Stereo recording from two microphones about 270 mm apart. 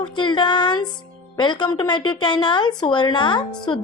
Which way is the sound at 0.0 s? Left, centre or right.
Centre.